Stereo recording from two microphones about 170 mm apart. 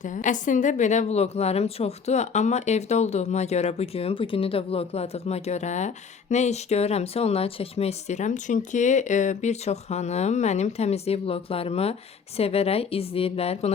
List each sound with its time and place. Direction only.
0.0 s a woman's voice: 45° left (ahead or behind)